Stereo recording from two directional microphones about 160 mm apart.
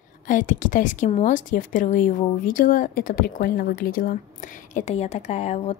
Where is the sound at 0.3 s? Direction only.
55° left (ahead or behind).